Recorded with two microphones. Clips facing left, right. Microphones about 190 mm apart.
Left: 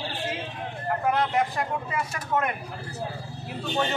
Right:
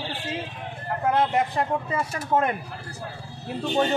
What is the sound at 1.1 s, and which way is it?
Speech, 25° right (ahead or behind).